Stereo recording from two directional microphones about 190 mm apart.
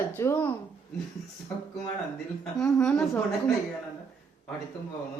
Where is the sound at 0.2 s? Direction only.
10° left (ahead or behind).